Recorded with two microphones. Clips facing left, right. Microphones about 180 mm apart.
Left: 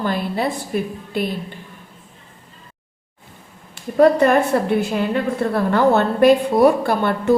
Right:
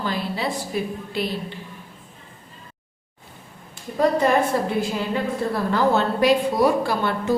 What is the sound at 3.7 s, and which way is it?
A woman's voice, 60° left (ahead or behind).